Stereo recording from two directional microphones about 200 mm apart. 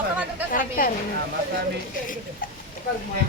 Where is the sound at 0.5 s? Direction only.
45° left (ahead or behind).